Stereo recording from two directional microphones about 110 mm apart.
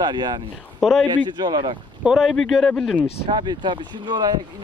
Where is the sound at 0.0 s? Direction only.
40° right (ahead or behind).